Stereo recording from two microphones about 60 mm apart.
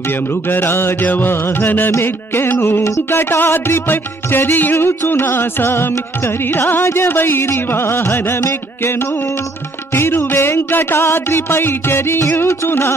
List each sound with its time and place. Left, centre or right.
0.3 s music: left
9.9 s music: left